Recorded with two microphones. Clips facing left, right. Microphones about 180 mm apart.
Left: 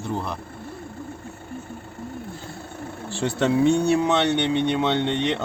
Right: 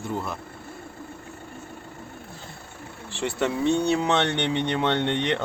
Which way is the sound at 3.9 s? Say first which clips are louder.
Left 3 dB; 5° left (ahead or behind).